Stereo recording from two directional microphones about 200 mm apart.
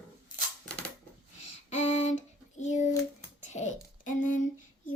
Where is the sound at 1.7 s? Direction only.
35° left (ahead or behind).